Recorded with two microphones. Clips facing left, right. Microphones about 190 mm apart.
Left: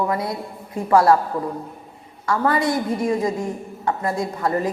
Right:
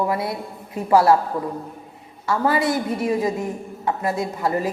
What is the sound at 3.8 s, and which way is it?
Speech, 25° right (ahead or behind).